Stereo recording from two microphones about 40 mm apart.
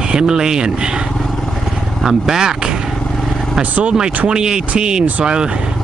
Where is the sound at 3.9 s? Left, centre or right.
Centre.